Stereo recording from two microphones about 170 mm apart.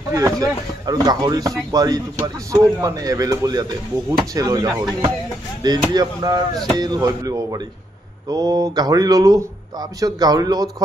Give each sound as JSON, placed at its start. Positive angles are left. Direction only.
{"t": 0.1, "sound": "speech", "side_deg": -20}